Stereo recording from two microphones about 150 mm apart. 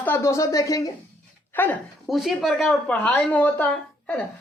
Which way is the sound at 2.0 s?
Centre (ahead or behind).